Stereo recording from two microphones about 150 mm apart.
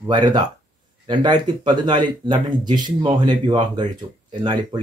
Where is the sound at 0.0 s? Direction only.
30° right (ahead or behind).